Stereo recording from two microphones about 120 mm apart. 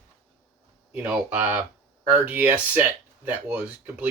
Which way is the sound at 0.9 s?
15° right (ahead or behind).